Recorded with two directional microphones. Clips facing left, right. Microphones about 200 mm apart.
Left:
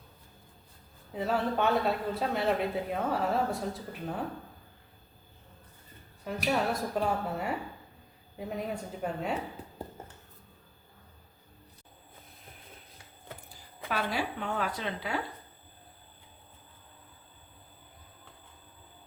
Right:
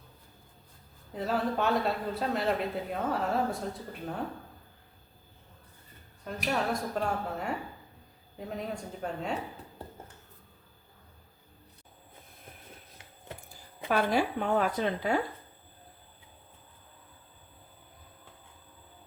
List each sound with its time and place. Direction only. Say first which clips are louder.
1.1 s a man's voice: even; centre (ahead or behind)
6.2 s a man's voice: left 2 dB; 5° left (ahead or behind)
13.8 s speech: right 5 dB; 50° right (ahead or behind)